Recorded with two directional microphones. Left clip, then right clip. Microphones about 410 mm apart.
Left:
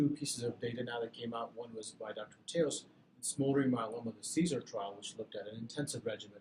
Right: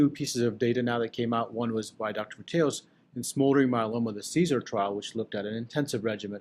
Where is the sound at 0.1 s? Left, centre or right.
Right.